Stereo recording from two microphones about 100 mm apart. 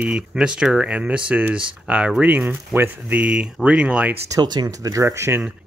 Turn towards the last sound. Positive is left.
turn(degrees=-25)  # may be behind; listen again after turning